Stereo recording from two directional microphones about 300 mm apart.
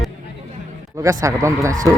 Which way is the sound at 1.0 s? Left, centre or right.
Centre.